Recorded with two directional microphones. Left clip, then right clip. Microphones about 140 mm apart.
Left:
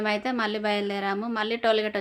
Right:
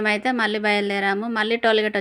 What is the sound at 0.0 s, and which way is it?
A woman's voice, 30° right (ahead or behind).